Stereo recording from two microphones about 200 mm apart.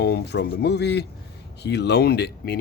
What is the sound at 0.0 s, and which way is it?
Speech, 55° left (ahead or behind).